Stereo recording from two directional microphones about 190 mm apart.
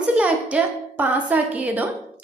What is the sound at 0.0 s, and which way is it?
A woman's voice, 5° right (ahead or behind).